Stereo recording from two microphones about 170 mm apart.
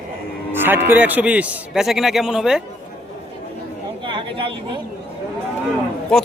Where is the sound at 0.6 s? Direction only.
10° right (ahead or behind).